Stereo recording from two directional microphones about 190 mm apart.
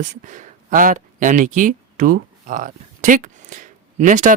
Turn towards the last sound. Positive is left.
turn(degrees=-40)  # may be behind; listen again after turning